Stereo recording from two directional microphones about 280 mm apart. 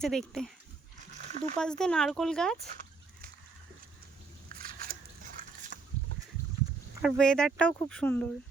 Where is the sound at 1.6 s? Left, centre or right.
Centre.